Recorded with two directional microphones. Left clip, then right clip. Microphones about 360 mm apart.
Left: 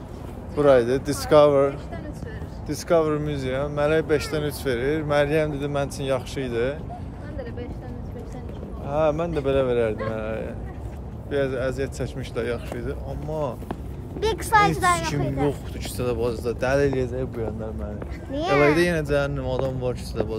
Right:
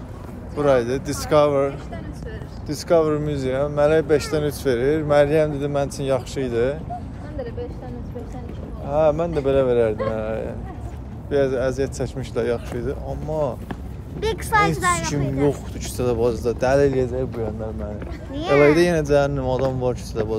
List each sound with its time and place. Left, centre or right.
0.6 s speech: centre
8.8 s speech: centre
15.8 s speech: centre
18.3 s speech: centre
18.8 s speech: centre